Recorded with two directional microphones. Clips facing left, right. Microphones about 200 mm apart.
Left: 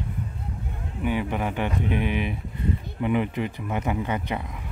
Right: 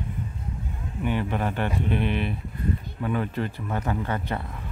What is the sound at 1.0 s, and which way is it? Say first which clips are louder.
Speech: left 1 dB; 10° left (ahead or behind).